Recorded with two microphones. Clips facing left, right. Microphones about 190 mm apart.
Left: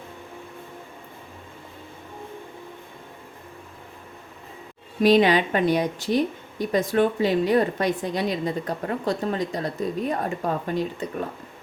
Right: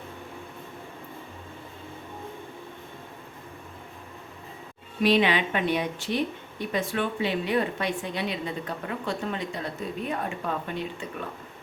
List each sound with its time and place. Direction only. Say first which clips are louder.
5.0 s speech: left 5 dB; 40° left (ahead or behind)